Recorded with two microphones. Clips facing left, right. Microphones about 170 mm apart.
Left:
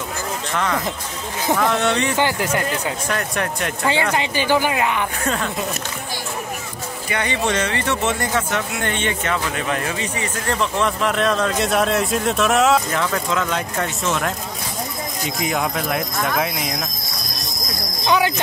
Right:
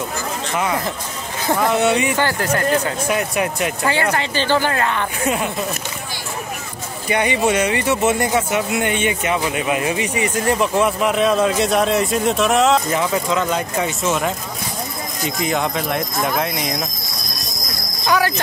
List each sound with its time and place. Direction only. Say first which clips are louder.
1.5 s speech: right 2 dB; 10° right (ahead or behind)
2.1 s speech: right 1 dB; 15° left (ahead or behind)
3.1 s speech: right 4 dB; 10° right (ahead or behind)
3.9 s speech: right 1 dB; 15° left (ahead or behind)
5.2 s speech: right 6 dB; 10° right (ahead or behind)
7.1 s speech: right 5 dB; 15° right (ahead or behind); by 16.7 s centre (ahead or behind)
18.0 s cricket: even; 20° left (ahead or behind)